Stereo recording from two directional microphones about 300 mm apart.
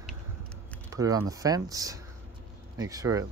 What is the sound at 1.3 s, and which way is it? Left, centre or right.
Speech, centre.